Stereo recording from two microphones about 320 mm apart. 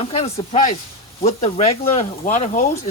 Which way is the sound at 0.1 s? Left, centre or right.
Centre.